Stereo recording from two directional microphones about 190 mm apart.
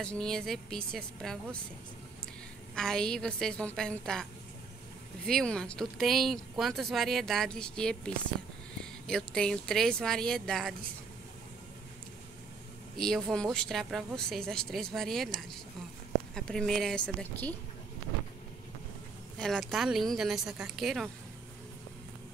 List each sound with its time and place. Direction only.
0.0 s speech: 5° left (ahead or behind)
2.7 s speech: 5° left (ahead or behind)
12.9 s speech: centre (ahead or behind)
19.3 s speech: 5° left (ahead or behind)